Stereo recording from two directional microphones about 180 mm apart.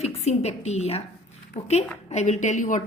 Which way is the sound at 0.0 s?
35° left (ahead or behind).